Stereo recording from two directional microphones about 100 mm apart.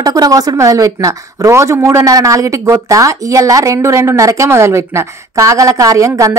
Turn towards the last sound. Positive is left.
turn(degrees=-30)  # may be behind; listen again after turning